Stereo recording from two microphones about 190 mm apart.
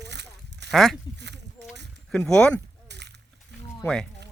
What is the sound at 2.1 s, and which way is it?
Speech, 5° left (ahead or behind).